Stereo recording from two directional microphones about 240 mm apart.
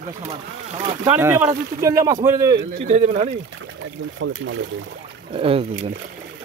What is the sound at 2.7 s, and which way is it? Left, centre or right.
Speech, right.